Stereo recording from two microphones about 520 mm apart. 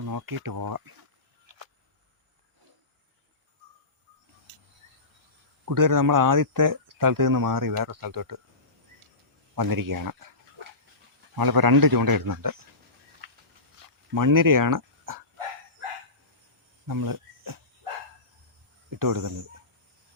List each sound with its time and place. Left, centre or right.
0.0 s speech: right
1.5 s a sound: right
5.6 s speech: right
9.6 s speech: right
11.3 s speech: right
13.8 s speech: right
16.8 s cricket: right
18.9 s speech: right